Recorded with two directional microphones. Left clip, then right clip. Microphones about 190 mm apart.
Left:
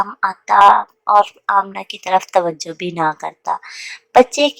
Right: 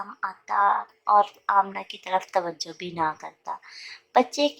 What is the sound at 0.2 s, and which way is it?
A woman's voice, 35° left (ahead or behind).